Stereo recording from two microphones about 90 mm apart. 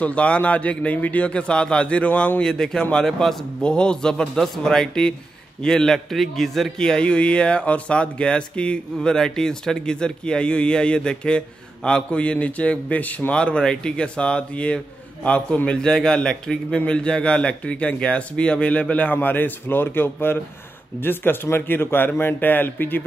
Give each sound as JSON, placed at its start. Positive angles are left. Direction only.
{"t": 0.0, "sound": "a man's voice", "side_deg": 15}